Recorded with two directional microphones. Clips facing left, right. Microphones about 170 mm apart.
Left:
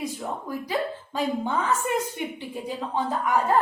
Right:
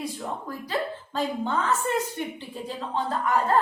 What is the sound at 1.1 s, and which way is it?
A woman's voice, 10° left (ahead or behind).